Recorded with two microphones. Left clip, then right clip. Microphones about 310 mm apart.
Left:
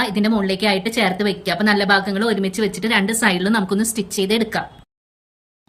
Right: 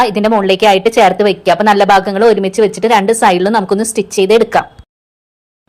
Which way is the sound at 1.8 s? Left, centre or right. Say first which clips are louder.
Right 9 dB; right.